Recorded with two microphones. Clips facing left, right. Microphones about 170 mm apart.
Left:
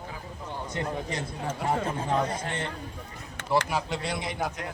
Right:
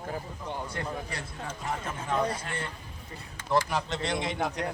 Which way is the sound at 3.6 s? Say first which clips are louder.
Left 1 dB; 5° left (ahead or behind).